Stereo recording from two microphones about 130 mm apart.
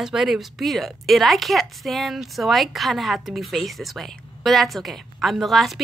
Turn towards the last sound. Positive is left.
turn(degrees=0)  # may be behind; listen again after turning